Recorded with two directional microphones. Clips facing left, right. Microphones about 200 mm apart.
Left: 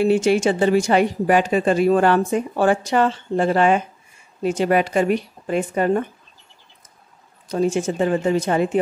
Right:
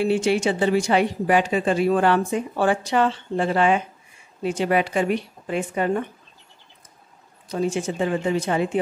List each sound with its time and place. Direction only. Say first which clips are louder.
0.0 s a woman's voice: left 4 dB; 45° left (ahead or behind)
7.4 s a woman's voice: left 4 dB; 45° left (ahead or behind)